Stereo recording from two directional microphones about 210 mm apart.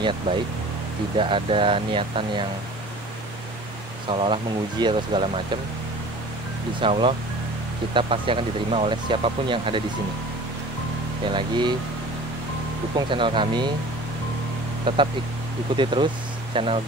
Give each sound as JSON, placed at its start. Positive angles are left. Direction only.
{"t": 1.1, "sound": "speech", "side_deg": -25}
{"t": 4.1, "sound": "speech", "side_deg": -25}
{"t": 6.8, "sound": "speech", "side_deg": -25}
{"t": 11.3, "sound": "speech", "side_deg": -20}
{"t": 13.1, "sound": "speech", "side_deg": -25}
{"t": 14.9, "sound": "speech", "side_deg": -20}